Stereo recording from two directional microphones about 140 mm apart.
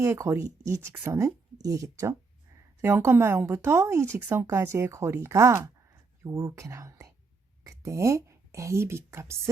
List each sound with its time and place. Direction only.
0.0 s speech: 20° right (ahead or behind)